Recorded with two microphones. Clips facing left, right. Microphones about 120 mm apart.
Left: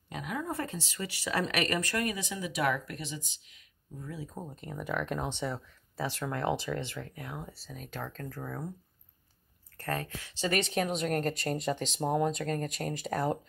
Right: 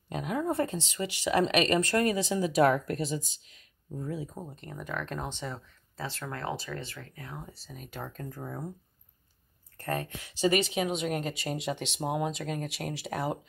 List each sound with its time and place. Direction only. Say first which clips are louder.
0.1 s speech: right 5 dB; 25° right (ahead or behind)
4.4 s speech: left 1 dB; centre (ahead or behind)
7.4 s speech: left 1 dB; centre (ahead or behind); by 8.6 s 15° right (ahead or behind)
9.8 s speech: right 2 dB; 20° right (ahead or behind); by 13.4 s 5° right (ahead or behind)